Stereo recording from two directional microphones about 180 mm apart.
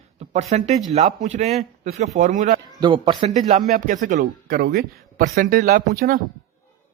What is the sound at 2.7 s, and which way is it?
Speech, 25° right (ahead or behind).